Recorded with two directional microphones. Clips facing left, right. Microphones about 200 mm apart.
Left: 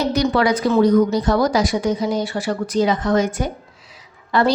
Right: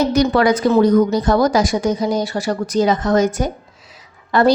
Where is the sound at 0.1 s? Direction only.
45° right (ahead or behind).